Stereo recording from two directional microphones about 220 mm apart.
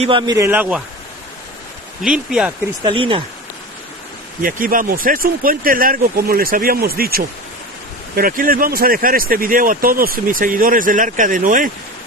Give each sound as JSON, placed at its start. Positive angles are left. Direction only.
{"t": 0.0, "sound": "a man's voice", "side_deg": -20}
{"t": 2.0, "sound": "speech", "side_deg": -5}
{"t": 2.8, "sound": "speech", "side_deg": -25}
{"t": 4.4, "sound": "speech", "side_deg": -40}